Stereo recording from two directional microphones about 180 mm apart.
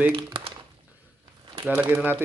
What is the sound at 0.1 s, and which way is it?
Crumpling, 35° right (ahead or behind).